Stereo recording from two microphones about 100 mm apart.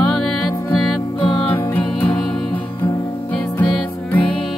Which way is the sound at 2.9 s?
35° left (ahead or behind).